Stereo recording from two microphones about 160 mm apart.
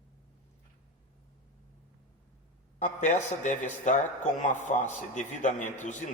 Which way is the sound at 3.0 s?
50° left (ahead or behind).